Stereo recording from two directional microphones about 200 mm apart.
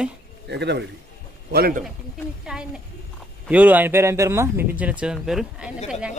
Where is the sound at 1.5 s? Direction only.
50° right (ahead or behind).